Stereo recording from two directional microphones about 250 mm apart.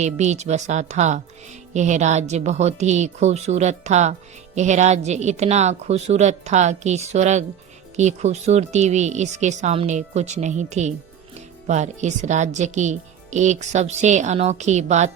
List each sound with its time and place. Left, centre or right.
0.0 s speech: right